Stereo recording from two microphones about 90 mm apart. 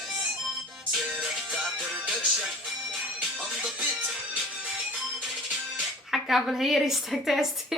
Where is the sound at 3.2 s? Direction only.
15° right (ahead or behind).